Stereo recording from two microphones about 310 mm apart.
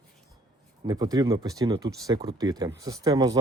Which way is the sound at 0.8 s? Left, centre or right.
Centre.